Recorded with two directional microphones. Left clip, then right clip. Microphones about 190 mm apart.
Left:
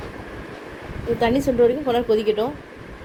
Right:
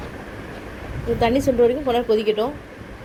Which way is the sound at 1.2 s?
15° left (ahead or behind).